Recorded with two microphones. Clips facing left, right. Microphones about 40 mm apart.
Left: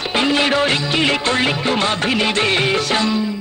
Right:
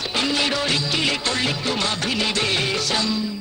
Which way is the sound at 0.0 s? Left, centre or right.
Left.